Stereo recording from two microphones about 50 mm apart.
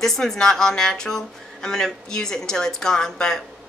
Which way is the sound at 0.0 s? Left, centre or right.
Centre.